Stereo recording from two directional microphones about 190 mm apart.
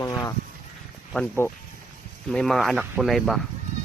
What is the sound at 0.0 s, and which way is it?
Speech, 20° left (ahead or behind).